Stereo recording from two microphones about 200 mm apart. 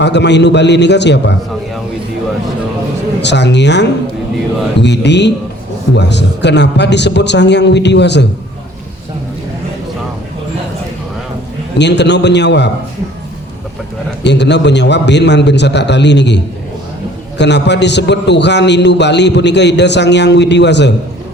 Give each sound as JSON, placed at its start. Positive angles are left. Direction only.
{"t": 0.0, "sound": "a man's voice", "side_deg": 60}
{"t": 3.2, "sound": "a man's voice", "side_deg": 60}
{"t": 11.8, "sound": "a man's voice", "side_deg": 60}
{"t": 14.3, "sound": "a man's voice", "side_deg": 60}